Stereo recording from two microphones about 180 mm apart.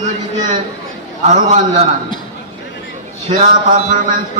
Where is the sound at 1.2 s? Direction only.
45° right (ahead or behind).